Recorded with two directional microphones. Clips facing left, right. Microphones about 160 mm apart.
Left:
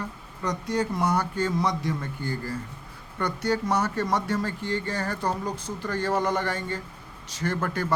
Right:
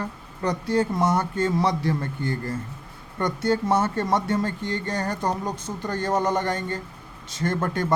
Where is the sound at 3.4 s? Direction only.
25° right (ahead or behind).